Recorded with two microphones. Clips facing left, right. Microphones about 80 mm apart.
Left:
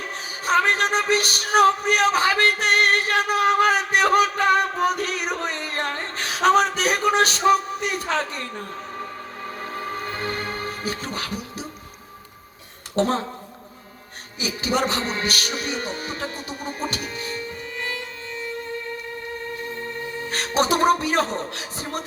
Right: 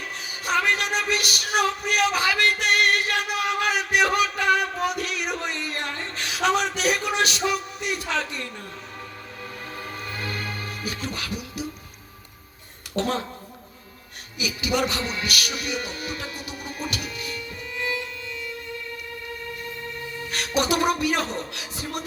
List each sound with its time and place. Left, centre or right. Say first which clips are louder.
0.4 s a sound: left 4 dB; left
9.7 s music: left 5 dB; left
13.0 s speech: left 4 dB; left
14.3 s music: left 2 dB; left
19.7 s music: left 4 dB; left